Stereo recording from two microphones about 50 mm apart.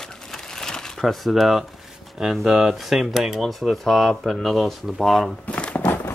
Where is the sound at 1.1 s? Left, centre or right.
Centre.